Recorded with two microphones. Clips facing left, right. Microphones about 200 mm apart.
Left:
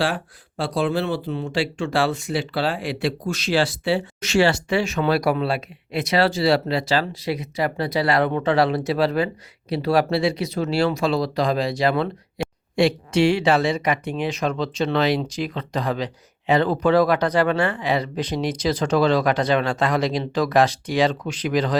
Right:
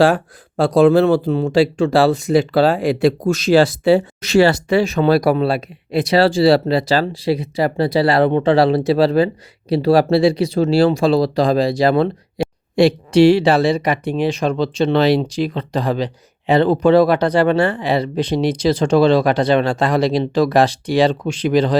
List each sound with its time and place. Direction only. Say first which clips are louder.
0.0 s speech: right 10 dB; 45° right (ahead or behind)
12.4 s a sound: right 6 dB; 35° right (ahead or behind)
12.7 s speech: right 6 dB; 35° right (ahead or behind)